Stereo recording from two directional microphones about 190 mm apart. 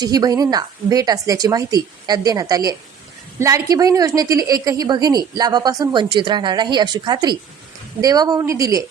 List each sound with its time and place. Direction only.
0.0 s a woman's voice: 20° right (ahead or behind)